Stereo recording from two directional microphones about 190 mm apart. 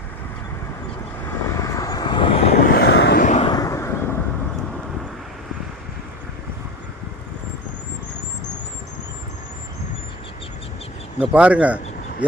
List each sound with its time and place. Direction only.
1.2 s vehicle: 15° left (ahead or behind)
2.7 s vehicle: 60° left (ahead or behind)
3.2 s vehicle: 40° left (ahead or behind)
3.4 s vehicle: 20° left (ahead or behind)
11.2 s speech: 5° right (ahead or behind)